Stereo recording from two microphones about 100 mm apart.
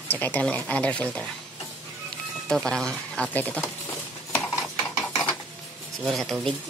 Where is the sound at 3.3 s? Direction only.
15° left (ahead or behind).